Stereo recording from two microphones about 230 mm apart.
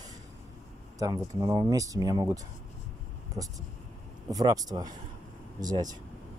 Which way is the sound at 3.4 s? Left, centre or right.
Centre.